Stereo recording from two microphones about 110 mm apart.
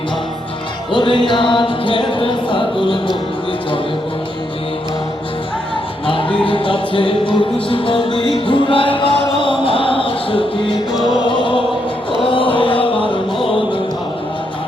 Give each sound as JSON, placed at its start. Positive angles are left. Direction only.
{"t": 0.9, "sound": "music", "side_deg": 50}
{"t": 6.1, "sound": "music", "side_deg": 50}
{"t": 12.2, "sound": "chant", "side_deg": 50}